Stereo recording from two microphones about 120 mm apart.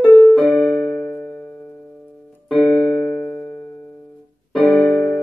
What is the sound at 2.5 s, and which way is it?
Piano, 10° left (ahead or behind).